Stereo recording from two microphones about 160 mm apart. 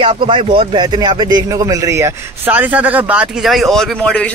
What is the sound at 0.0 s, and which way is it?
Speech, 35° right (ahead or behind).